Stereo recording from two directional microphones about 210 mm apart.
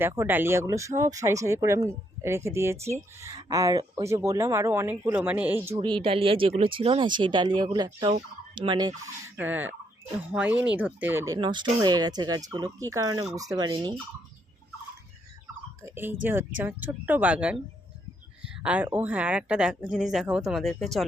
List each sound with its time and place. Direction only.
0.0 s speech: 10° right (ahead or behind)
5.7 s speech: 20° right (ahead or behind)
11.3 s speech: 20° right (ahead or behind)
15.8 s speech: 10° right (ahead or behind)
18.4 s a sound: 5° right (ahead or behind)
18.9 s speech: 10° right (ahead or behind)